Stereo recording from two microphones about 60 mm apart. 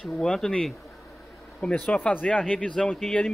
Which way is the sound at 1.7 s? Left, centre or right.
Left.